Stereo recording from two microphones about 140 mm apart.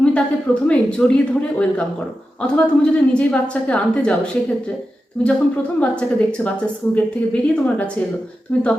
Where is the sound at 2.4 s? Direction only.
5° left (ahead or behind).